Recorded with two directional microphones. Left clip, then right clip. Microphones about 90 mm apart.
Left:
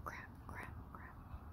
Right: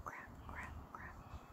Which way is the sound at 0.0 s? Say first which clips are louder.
Even; 45° left (ahead or behind).